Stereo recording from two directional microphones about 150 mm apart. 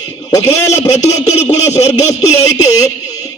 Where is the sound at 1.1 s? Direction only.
45° left (ahead or behind).